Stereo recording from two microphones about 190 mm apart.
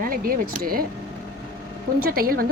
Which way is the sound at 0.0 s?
50° right (ahead or behind).